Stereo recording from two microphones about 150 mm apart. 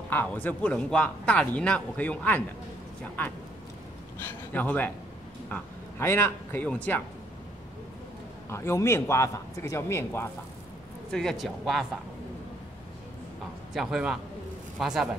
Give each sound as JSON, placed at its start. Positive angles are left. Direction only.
{"t": 0.1, "sound": "speech", "side_deg": 10}
{"t": 4.2, "sound": "speech", "side_deg": 15}
{"t": 8.5, "sound": "speech", "side_deg": 20}
{"t": 11.1, "sound": "speech", "side_deg": 0}
{"t": 13.7, "sound": "speech", "side_deg": -5}